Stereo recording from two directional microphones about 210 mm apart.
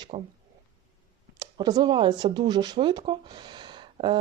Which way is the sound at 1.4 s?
20° right (ahead or behind).